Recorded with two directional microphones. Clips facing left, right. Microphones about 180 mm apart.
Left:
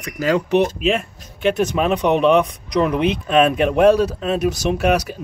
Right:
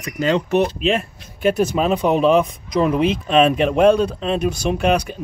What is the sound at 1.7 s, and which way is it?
Speech, 35° right (ahead or behind).